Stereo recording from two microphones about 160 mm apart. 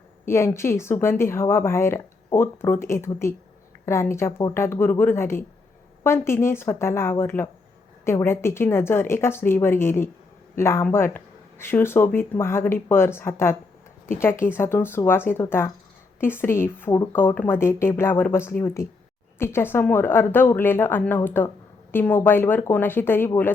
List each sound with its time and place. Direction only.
0.3 s speech: 15° left (ahead or behind)